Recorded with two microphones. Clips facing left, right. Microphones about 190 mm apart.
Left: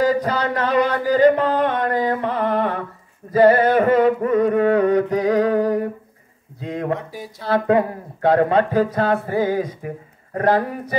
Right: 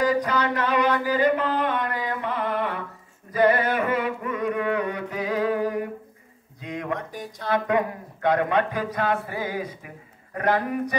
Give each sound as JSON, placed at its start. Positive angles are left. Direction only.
{"t": 0.0, "sound": "a sound", "side_deg": 35}
{"t": 7.0, "sound": "speech", "side_deg": 5}
{"t": 7.4, "sound": "speech", "side_deg": 35}